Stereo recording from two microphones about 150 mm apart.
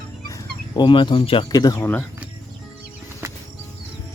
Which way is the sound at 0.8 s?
35° left (ahead or behind).